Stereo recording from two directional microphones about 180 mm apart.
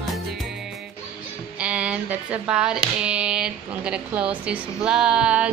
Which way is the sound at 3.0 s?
5° right (ahead or behind).